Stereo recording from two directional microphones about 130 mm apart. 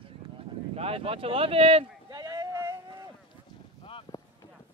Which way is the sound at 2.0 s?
30° right (ahead or behind).